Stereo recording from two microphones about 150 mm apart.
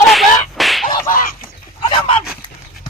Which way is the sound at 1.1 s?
70° left (ahead or behind).